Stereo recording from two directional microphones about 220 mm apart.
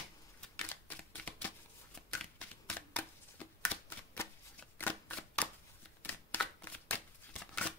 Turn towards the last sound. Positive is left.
turn(degrees=5)  # may be behind; listen again after turning